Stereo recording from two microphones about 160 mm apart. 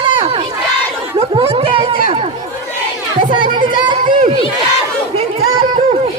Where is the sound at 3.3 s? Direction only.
30° right (ahead or behind).